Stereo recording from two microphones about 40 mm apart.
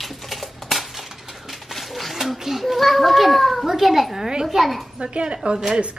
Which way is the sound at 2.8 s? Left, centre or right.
Centre.